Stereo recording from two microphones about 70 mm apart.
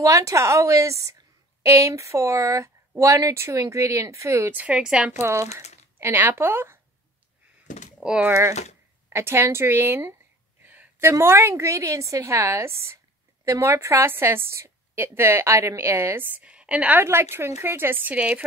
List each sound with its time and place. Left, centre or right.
0.0 s a woman's voice: right
4.6 s a woman's voice: centre
5.1 s speech: right
8.0 s a woman's voice: centre
9.1 s a woman's voice: right
10.6 s a sound: right
11.0 s a woman's voice: right
16.2 s a woman's voice: right
16.4 s a woman's voice: centre
17.0 s a woman's voice: right